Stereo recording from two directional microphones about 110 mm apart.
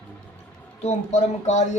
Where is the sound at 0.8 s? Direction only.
85° left.